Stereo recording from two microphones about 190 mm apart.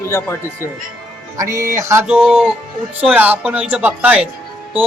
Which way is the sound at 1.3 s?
15° right (ahead or behind).